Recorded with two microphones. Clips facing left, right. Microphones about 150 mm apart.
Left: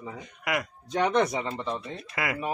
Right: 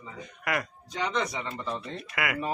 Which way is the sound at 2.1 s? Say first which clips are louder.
Even; 30° left (ahead or behind).